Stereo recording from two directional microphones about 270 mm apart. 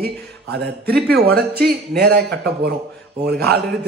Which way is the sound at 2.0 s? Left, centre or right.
Right.